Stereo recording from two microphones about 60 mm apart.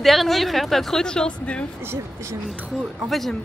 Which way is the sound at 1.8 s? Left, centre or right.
Right.